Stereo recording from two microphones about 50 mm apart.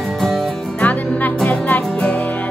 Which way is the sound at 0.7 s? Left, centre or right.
Left.